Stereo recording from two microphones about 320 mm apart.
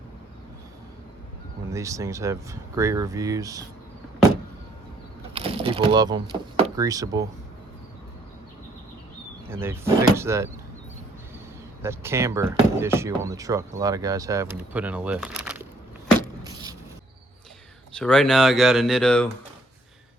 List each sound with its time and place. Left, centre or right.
1.7 s speech: centre
5.3 s speech: centre
9.5 s speech: centre
11.8 s speech: centre
16.4 s a sound: centre
17.9 s speech: centre